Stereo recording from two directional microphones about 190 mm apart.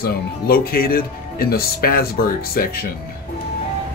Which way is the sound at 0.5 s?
50° left (ahead or behind).